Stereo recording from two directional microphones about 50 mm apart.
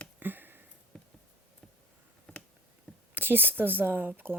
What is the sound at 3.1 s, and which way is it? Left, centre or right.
Speech, right.